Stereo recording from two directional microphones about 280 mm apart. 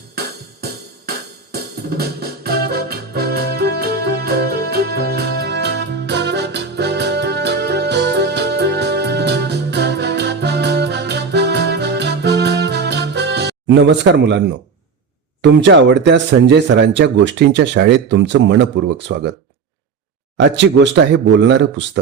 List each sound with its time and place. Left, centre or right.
0.6 s music: right
15.4 s speech: right
20.4 s speech: right